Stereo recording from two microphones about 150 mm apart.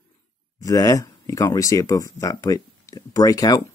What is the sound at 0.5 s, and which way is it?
Speech, 25° left (ahead or behind).